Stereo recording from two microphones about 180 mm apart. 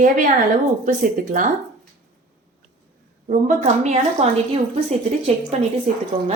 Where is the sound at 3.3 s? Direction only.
45° right (ahead or behind).